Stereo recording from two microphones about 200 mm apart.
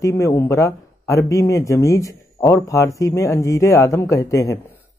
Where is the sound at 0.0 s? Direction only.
15° left (ahead or behind).